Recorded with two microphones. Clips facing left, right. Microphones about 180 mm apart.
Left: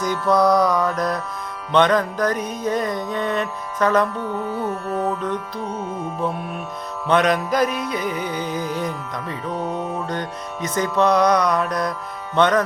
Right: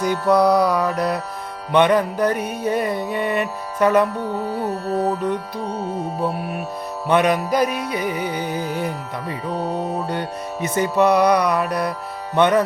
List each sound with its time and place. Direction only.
0.0 s music: 10° right (ahead or behind)
4.2 s music: 35° right (ahead or behind)
6.2 s music: 5° right (ahead or behind)
9.5 s music: 35° right (ahead or behind)
10.8 s music: 10° right (ahead or behind)